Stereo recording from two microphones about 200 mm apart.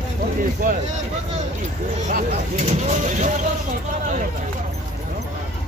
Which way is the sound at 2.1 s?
35° right (ahead or behind).